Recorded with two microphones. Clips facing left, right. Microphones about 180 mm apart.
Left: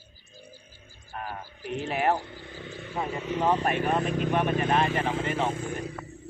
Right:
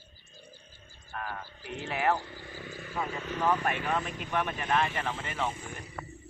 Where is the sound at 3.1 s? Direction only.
5° left (ahead or behind).